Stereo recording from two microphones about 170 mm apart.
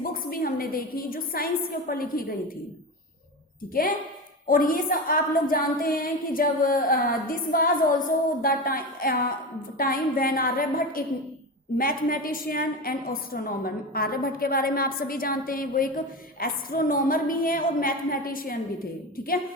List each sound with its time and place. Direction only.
0.0 s a woman's voice: 55° left (ahead or behind)
4.4 s a woman's voice: 55° left (ahead or behind)